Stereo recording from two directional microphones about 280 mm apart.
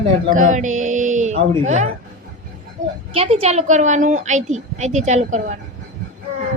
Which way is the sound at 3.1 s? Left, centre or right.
Right.